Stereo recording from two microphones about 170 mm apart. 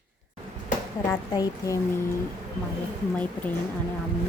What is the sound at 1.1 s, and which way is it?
Speech, 20° left (ahead or behind).